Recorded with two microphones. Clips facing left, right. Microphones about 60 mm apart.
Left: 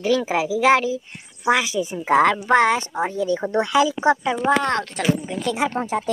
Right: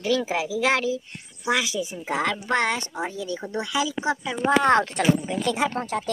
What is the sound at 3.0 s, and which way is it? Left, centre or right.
Speech, left.